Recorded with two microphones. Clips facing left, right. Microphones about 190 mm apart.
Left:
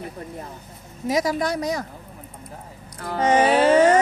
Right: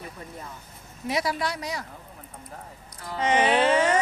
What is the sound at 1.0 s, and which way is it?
Speech, 40° left (ahead or behind).